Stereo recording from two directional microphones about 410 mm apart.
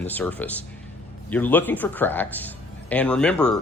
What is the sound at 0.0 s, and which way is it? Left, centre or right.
Speech, centre.